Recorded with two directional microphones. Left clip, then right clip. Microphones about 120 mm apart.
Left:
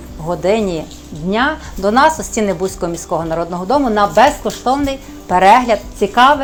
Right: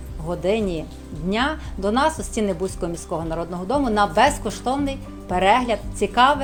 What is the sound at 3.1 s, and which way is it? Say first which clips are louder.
A woman's voice: left 10 dB; 25° right (ahead or behind).